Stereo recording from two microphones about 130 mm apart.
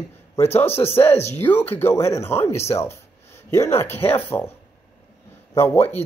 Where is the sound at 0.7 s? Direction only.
50° left (ahead or behind).